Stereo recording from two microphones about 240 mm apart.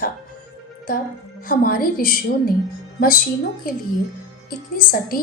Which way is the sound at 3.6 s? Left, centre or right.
Left.